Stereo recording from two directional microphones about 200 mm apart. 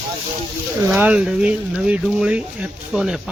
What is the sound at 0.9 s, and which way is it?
Speech, 5° right (ahead or behind).